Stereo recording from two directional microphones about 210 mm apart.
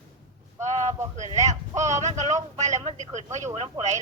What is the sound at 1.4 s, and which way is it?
Speech, 35° right (ahead or behind).